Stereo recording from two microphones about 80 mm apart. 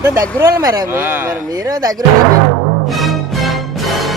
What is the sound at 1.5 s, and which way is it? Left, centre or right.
Speech, right.